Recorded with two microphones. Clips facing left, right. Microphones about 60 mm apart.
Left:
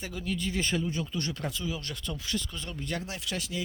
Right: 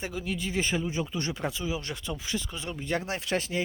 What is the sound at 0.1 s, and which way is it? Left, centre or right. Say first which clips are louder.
Speech: right 1 dB; centre.